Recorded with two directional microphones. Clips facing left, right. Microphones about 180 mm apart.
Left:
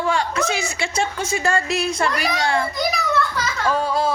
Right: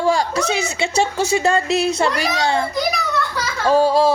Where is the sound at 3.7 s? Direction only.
30° right (ahead or behind).